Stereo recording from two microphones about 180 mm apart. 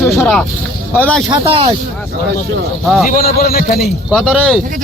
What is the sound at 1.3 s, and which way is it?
Speech, 30° right (ahead or behind).